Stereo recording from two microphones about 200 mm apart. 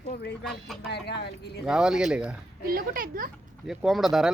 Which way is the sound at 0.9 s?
55° left (ahead or behind).